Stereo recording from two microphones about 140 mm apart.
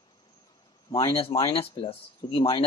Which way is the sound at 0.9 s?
25° left (ahead or behind).